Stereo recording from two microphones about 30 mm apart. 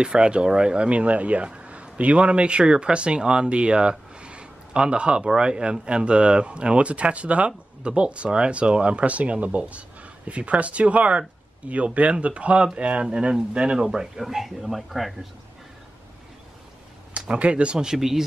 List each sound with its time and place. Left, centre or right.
0.1 s speech: right
4.2 s a sound: right
5.4 s speech: right
7.8 s speech: right
13.0 s speech: right
13.7 s speech: right
14.1 s speech: centre
17.3 s speech: right
17.7 s speech: centre